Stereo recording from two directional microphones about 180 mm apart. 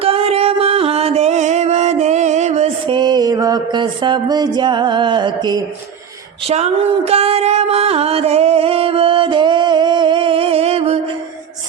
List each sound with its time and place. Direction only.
0.0 s music: 35° right (ahead or behind)
2.9 s mantra: 25° right (ahead or behind)
6.5 s music: 35° right (ahead or behind)